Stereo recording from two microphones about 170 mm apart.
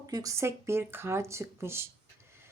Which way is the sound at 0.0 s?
20° right (ahead or behind).